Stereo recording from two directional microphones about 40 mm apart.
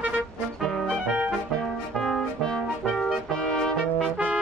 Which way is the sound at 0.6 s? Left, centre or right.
Centre.